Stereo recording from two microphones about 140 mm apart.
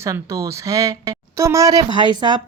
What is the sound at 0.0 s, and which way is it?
Speech, 20° right (ahead or behind).